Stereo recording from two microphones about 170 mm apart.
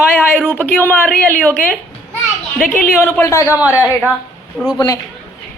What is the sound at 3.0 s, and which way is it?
Speech, 15° left (ahead or behind).